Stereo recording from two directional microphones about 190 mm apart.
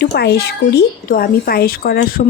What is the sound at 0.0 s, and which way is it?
A child's voice, 60° left (ahead or behind).